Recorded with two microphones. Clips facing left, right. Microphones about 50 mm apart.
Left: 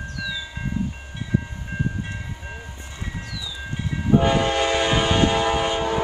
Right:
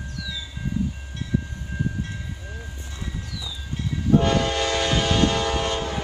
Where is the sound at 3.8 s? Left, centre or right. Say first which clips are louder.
Left 1 dB; centre.